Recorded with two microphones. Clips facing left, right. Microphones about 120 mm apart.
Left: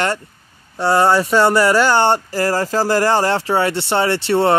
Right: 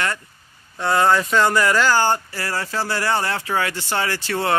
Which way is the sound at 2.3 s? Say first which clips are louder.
Left 8 dB; 40° left (ahead or behind).